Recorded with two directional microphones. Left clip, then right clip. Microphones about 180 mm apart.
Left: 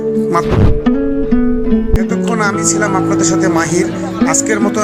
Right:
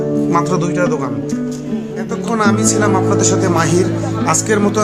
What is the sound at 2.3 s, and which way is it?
Music, 30° left (ahead or behind).